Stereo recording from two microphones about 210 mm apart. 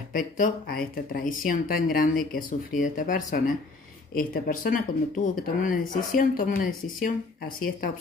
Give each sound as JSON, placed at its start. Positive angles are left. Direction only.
{"t": 0.1, "sound": "speech", "side_deg": 40}